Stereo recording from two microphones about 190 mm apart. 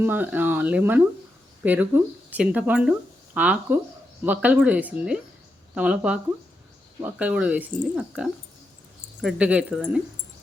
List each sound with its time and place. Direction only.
0.0 s speech: 10° right (ahead or behind)